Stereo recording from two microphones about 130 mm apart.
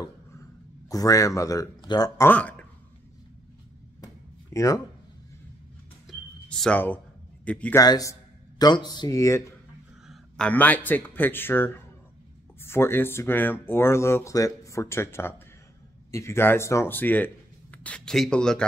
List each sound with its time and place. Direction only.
0.0 s a sound: 25° left (ahead or behind)
2.2 s speech: 10° left (ahead or behind)
4.0 s a sound: 25° left (ahead or behind)
6.0 s music: 5° left (ahead or behind)
7.4 s a man's voice: 10° left (ahead or behind)
7.7 s speech: 30° left (ahead or behind)
10.0 s speech: 5° left (ahead or behind)